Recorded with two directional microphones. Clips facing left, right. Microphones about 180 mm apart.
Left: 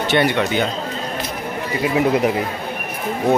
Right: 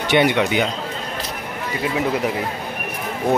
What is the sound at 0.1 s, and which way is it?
Speech, 15° right (ahead or behind).